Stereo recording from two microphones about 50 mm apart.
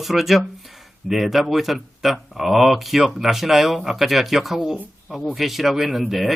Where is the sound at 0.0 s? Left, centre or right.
Centre.